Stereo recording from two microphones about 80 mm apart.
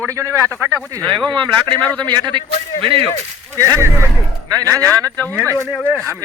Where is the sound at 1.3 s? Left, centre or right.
Right.